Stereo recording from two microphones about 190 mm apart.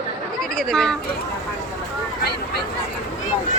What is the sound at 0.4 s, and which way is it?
Speech, centre (ahead or behind).